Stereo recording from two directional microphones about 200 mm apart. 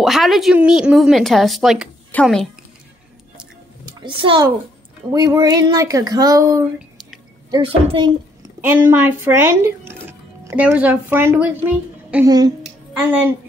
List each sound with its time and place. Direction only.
0.0 s speech: centre (ahead or behind)
4.0 s a child's voice: 25° right (ahead or behind)
8.5 s speech: 10° right (ahead or behind)
12.3 s a child's voice: 20° right (ahead or behind)
13.1 s speech: 10° right (ahead or behind)